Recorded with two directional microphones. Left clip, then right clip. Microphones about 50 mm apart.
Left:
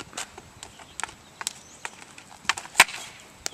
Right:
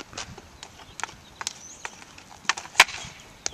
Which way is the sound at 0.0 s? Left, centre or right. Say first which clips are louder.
Left 1 dB; left.